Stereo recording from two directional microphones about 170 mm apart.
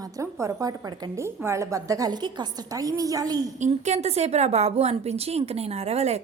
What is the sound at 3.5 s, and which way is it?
A woman's voice, 45° right (ahead or behind).